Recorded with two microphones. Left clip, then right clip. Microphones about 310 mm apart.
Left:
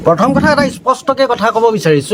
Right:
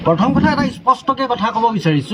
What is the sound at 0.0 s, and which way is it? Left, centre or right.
Speech, centre.